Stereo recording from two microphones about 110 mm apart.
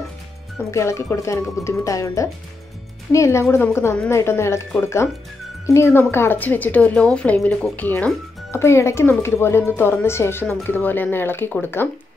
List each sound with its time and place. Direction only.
0.7 s a woman's voice: 25° left (ahead or behind)